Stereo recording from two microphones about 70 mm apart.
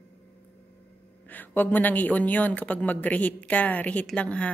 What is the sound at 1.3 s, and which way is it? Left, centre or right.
A woman's voice, left.